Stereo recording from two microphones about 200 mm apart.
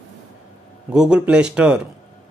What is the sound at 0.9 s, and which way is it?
A man's voice, 5° right (ahead or behind).